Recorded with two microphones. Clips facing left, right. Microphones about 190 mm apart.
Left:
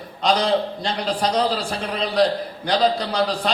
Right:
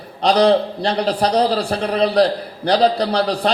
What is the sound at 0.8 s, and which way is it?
A man's voice, 35° right (ahead or behind).